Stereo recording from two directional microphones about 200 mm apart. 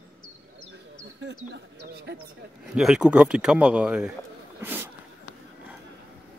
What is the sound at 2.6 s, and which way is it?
Speech, centre (ahead or behind).